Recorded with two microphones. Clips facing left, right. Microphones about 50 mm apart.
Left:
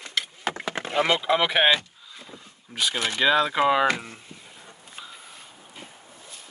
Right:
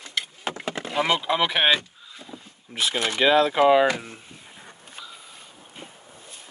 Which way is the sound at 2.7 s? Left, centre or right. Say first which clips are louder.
Right 1 dB; right.